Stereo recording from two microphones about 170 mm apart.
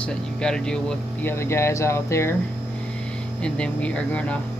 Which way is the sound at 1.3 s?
15° left (ahead or behind).